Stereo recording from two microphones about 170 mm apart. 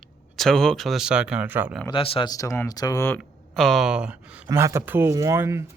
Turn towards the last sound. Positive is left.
turn(degrees=-15)  # may be behind; listen again after turning